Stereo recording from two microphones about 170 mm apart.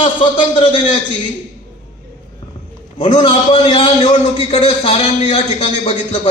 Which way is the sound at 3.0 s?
25° left (ahead or behind).